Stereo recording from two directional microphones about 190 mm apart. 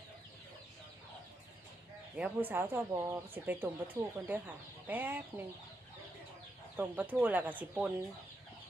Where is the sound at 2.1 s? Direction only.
10° right (ahead or behind).